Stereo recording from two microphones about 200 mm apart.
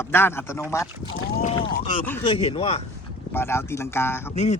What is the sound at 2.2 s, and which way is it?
Speech, 30° left (ahead or behind).